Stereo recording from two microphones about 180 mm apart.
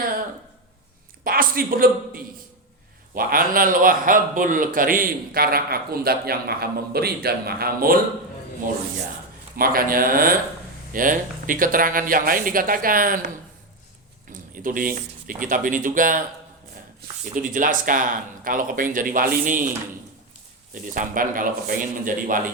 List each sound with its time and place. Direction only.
1.2 s a man's voice: 55° right (ahead or behind)
9.6 s speech: 55° right (ahead or behind)
14.5 s speech: 50° right (ahead or behind)
17.3 s speech: 50° right (ahead or behind)
20.7 s speech: 50° right (ahead or behind)